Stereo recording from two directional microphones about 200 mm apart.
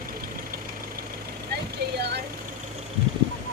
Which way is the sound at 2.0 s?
55° right (ahead or behind).